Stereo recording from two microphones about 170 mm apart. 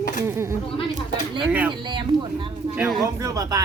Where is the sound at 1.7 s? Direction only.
30° right (ahead or behind).